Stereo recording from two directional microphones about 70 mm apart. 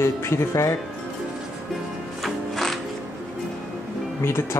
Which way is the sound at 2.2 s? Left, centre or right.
Centre.